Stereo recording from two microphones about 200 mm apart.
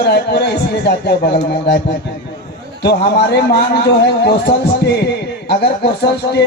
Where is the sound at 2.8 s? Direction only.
55° left (ahead or behind).